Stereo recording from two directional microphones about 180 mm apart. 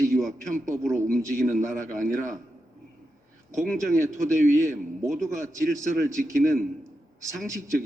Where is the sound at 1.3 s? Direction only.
45° right (ahead or behind).